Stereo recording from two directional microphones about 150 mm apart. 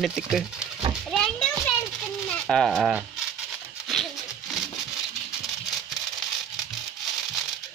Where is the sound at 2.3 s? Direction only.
5° left (ahead or behind).